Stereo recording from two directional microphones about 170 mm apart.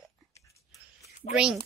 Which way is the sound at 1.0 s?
5° right (ahead or behind).